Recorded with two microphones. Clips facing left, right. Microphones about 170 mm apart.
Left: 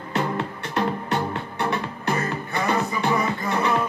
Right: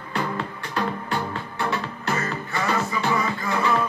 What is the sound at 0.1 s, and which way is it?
Music, 25° left (ahead or behind).